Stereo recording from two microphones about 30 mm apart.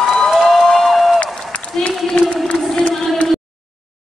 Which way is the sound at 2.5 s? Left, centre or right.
Left.